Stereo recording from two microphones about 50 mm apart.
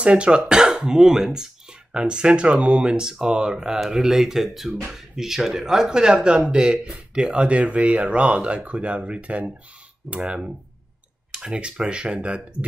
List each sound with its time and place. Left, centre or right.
0.0 s speech: right
2.9 s speech: centre